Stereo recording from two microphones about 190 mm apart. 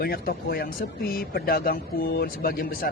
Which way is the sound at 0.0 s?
50° left (ahead or behind).